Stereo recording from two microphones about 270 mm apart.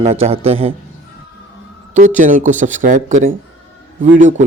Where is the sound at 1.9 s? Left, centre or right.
Right.